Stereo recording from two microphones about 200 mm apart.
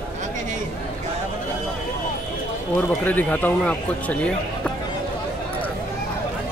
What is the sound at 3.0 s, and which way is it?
Speech, 10° left (ahead or behind).